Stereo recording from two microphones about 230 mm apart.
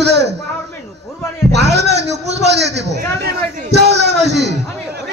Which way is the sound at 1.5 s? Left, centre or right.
Right.